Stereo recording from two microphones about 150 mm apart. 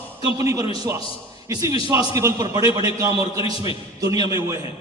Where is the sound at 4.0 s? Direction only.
20° right (ahead or behind).